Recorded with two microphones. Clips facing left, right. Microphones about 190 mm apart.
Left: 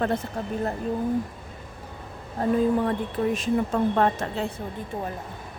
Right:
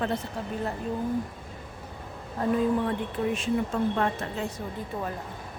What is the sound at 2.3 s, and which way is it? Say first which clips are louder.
A woman's voice: left 3 dB; 45° left (ahead or behind).